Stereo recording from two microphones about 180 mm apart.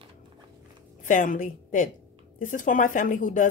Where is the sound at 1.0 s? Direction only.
45° left (ahead or behind).